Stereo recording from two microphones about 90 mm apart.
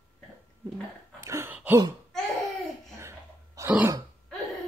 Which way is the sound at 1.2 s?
30° right (ahead or behind).